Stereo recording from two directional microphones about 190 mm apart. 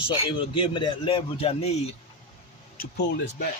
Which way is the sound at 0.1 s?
25° left (ahead or behind).